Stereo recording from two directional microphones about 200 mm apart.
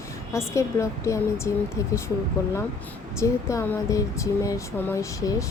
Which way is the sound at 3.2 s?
15° left (ahead or behind).